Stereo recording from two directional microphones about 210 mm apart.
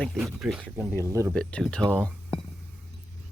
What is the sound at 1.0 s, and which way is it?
Speech, 15° right (ahead or behind).